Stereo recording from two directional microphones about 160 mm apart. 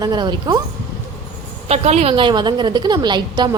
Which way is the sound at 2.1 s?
30° right (ahead or behind).